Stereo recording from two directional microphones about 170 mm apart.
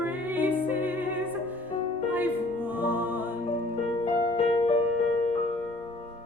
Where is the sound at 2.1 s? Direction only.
10° right (ahead or behind).